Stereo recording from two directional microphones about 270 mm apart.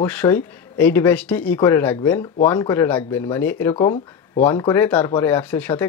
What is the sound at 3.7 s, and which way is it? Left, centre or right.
Speech, left.